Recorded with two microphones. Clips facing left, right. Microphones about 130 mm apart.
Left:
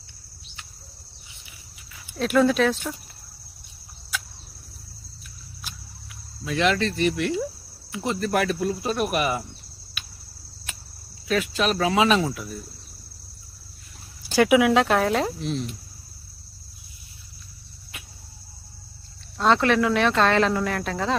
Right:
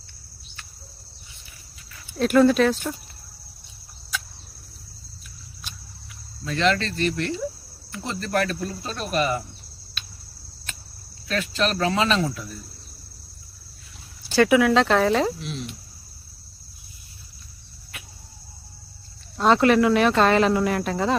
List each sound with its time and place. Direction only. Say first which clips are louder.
2.1 s speech: right 3 dB; centre (ahead or behind)
6.4 s speech: even; 10° left (ahead or behind)
10.0 s a sound: right 1 dB; 10° left (ahead or behind)
11.3 s speech: left 1 dB; 10° left (ahead or behind)
14.3 s speech: even; 15° left (ahead or behind)
15.4 s speech: left 5 dB; 40° left (ahead or behind)
19.4 s speech: right 3 dB; 5° right (ahead or behind)